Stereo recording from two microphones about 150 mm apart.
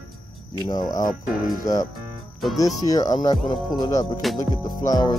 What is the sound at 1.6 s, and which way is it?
Music, 25° left (ahead or behind).